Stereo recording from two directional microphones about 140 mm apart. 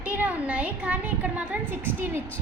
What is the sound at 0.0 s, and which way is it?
A woman's voice, 10° right (ahead or behind).